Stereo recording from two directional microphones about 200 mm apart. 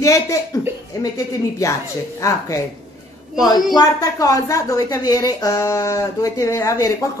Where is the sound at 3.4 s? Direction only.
20° left (ahead or behind).